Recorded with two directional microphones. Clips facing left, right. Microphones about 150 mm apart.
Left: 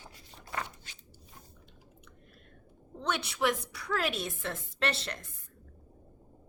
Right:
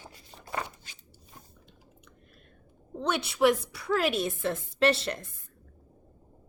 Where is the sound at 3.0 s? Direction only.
5° right (ahead or behind).